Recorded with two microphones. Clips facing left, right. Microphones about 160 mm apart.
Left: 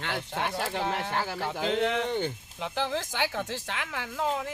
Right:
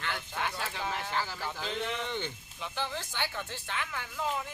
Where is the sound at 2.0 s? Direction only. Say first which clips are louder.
Left 7 dB; 45° left (ahead or behind).